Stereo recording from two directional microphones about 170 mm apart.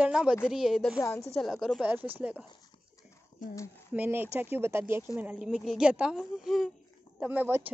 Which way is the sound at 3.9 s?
10° right (ahead or behind).